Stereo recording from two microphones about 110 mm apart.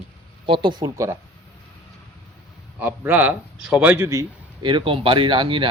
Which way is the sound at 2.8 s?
15° right (ahead or behind).